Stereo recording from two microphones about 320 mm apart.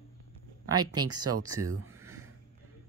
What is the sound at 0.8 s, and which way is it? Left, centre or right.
Speech, centre.